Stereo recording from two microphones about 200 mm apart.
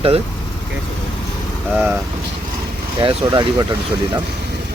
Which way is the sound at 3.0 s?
25° right (ahead or behind).